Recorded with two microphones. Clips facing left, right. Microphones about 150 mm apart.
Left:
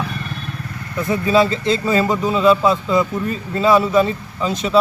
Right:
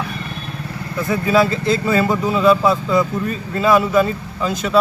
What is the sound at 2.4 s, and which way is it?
Speech, 10° right (ahead or behind).